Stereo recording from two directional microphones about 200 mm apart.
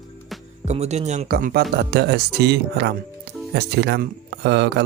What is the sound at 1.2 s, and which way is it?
Speech, 50° right (ahead or behind).